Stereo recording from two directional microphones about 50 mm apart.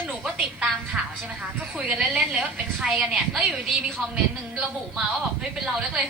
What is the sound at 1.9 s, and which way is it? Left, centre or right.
A woman's voice, right.